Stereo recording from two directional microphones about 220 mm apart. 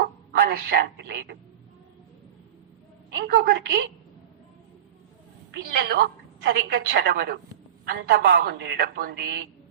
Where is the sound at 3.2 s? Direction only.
45° right (ahead or behind).